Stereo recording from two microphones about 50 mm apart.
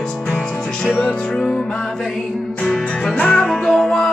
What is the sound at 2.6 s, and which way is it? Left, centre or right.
Music, centre.